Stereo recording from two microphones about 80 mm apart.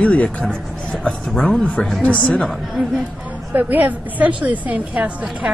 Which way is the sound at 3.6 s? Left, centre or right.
Right.